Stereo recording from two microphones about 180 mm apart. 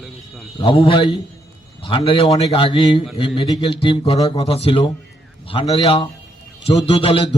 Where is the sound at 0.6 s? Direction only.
30° left (ahead or behind).